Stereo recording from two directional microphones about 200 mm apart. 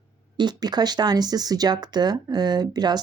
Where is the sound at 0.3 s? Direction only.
20° right (ahead or behind).